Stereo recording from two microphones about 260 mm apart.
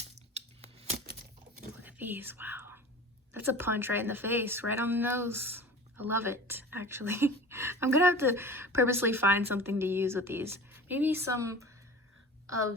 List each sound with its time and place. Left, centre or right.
0.0 s scissors: right
1.8 s whispering: centre
3.4 s a woman's voice: centre